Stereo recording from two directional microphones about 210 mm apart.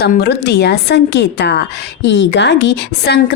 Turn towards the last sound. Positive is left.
turn(degrees=50)  # may be behind; listen again after turning